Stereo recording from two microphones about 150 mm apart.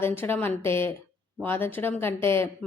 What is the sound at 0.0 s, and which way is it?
Speech, 15° left (ahead or behind).